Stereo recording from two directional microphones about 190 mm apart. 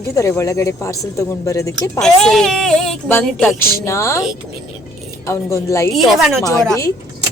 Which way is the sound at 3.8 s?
15° left (ahead or behind).